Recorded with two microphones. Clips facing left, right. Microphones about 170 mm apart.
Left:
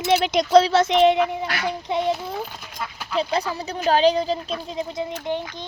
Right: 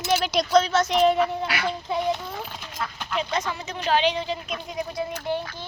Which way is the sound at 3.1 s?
35° left (ahead or behind).